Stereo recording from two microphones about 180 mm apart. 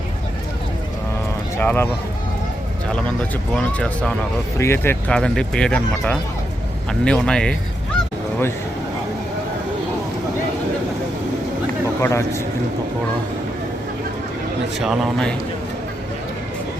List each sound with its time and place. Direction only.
1.5 s speech: 10° left (ahead or behind)
3.5 s speech: 5° left (ahead or behind)
12.0 s speech: 15° left (ahead or behind)
14.8 s speech: centre (ahead or behind)